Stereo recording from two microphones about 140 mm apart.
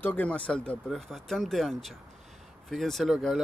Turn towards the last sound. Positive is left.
turn(degrees=0)  # may be behind; listen again after turning